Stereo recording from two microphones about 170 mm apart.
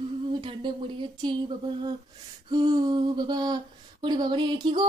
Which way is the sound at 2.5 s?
25° right (ahead or behind).